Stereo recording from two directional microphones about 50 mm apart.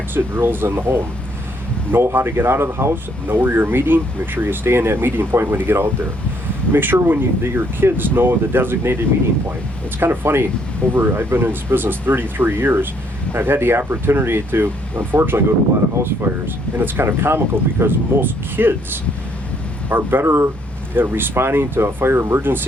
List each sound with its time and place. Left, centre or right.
0.3 s speech: right
2.9 s speech: right
10.0 s speech: right
19.9 s speech: right
20.9 s speech: right
22.4 s speech: right